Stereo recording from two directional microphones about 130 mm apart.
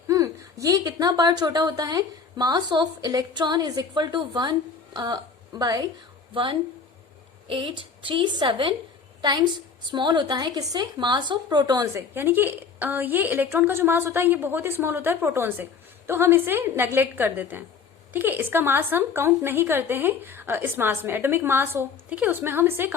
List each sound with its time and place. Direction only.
0.1 s a woman's voice: 25° right (ahead or behind)
9.9 s a woman's voice: 35° right (ahead or behind)
12.1 s a woman's voice: 15° right (ahead or behind)